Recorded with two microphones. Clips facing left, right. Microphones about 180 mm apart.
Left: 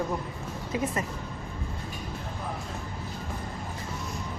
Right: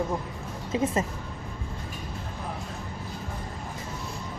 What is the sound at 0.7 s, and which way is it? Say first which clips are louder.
Speech: right 3 dB; 25° right (ahead or behind).